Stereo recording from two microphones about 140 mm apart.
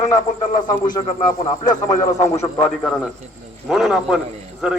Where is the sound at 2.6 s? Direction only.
5° left (ahead or behind).